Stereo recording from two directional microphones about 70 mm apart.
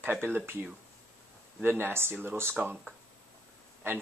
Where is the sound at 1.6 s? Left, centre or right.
Right.